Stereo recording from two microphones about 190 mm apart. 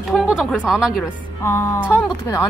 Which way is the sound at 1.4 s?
15° left (ahead or behind).